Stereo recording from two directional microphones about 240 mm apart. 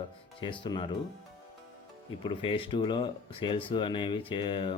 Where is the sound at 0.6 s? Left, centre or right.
Centre.